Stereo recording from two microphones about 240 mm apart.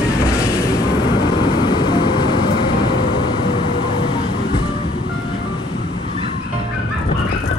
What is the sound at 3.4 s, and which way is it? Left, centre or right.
Vehicle, left.